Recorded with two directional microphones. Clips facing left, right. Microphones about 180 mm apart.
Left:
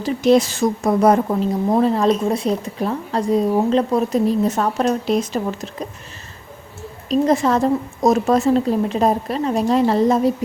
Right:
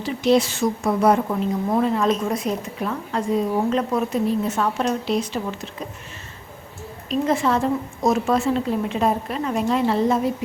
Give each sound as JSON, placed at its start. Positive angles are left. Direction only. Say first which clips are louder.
{"t": 0.0, "sound": "a woman's voice", "louder": "left 4 dB", "side_deg": 45}
{"t": 7.1, "sound": "a woman's voice", "louder": "left 4 dB", "side_deg": 40}